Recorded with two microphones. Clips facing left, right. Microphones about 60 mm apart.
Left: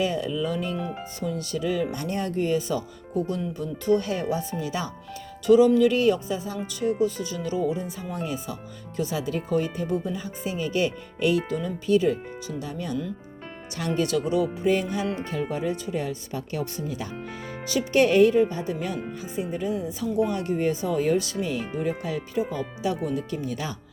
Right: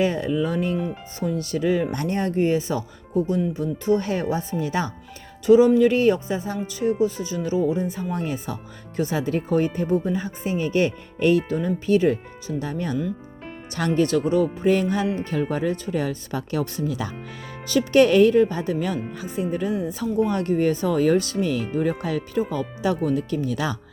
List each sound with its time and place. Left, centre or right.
0.0 s speech: right
1.9 s speech: right
2.1 s speech: right
5.5 s speech: right
13.7 s speech: right
14.1 s speech: right
17.7 s speech: right